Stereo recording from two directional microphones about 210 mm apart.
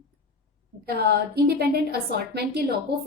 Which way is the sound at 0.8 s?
50° right (ahead or behind).